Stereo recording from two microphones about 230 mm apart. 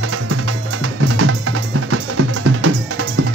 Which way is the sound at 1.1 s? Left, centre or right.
Right.